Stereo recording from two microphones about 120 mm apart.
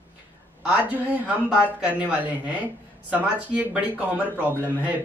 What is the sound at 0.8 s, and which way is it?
Speech, 15° right (ahead or behind).